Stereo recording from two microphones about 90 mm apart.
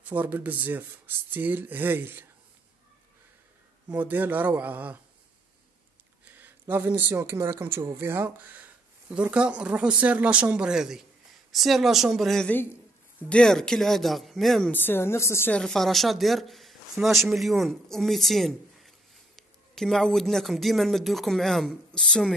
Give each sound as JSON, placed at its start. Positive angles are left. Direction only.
{"t": 0.0, "sound": "speech", "side_deg": -15}
{"t": 3.9, "sound": "speech", "side_deg": -20}
{"t": 6.4, "sound": "speech", "side_deg": -25}
{"t": 9.1, "sound": "speech", "side_deg": -10}
{"t": 14.7, "sound": "a woman's voice", "side_deg": 20}
{"t": 15.5, "sound": "speech", "side_deg": 5}